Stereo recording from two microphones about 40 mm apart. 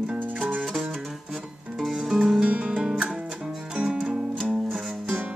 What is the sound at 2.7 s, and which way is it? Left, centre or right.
Music, centre.